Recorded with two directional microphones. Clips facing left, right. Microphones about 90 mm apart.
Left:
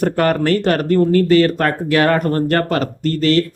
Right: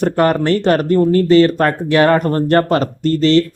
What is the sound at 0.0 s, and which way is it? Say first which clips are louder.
Speech: right 2 dB; 25° right (ahead or behind).